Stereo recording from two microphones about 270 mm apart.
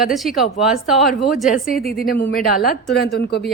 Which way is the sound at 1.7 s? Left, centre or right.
Left.